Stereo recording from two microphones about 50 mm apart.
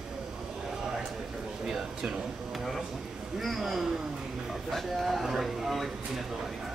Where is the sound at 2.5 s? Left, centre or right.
Centre.